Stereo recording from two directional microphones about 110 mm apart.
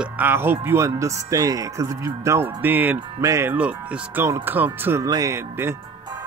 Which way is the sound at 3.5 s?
15° right (ahead or behind).